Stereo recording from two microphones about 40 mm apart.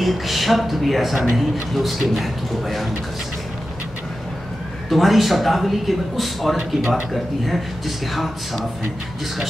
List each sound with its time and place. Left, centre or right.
0.0 s speech: centre
4.8 s speech: centre